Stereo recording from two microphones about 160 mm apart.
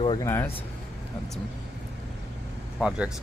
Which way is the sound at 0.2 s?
15° left (ahead or behind).